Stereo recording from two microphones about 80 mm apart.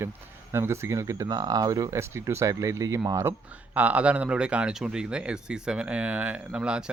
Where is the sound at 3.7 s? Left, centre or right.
Centre.